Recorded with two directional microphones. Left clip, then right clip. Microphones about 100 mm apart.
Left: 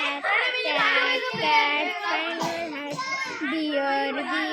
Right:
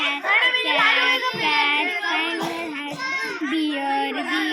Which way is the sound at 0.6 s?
25° left (ahead or behind).